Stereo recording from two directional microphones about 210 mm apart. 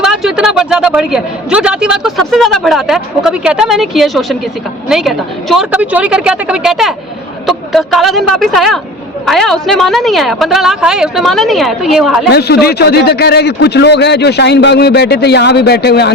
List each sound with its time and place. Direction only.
0.0 s a man's voice: centre (ahead or behind)
12.3 s a man's voice: 50° left (ahead or behind)